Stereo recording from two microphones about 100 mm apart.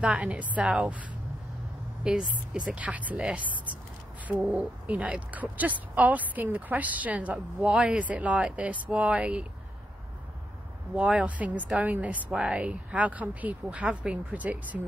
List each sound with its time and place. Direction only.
0.0 s speech: 15° right (ahead or behind)
2.0 s speech: 10° right (ahead or behind)
11.0 s speech: 10° right (ahead or behind)